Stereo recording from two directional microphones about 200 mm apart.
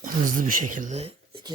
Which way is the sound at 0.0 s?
40° right (ahead or behind).